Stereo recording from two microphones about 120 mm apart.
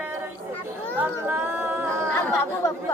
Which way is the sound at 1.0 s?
15° right (ahead or behind).